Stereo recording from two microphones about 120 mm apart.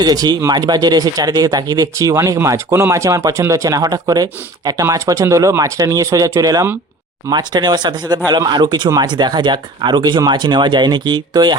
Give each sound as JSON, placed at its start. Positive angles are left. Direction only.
{"t": 0.0, "sound": "speech", "side_deg": -35}